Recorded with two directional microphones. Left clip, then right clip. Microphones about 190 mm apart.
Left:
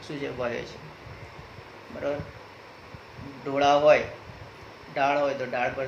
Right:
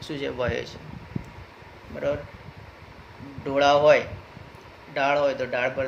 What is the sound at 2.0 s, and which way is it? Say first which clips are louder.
Speech: right 3 dB; 55° right (ahead or behind).